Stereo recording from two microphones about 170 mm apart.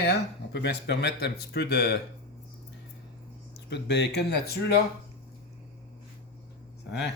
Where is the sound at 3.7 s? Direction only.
85° left.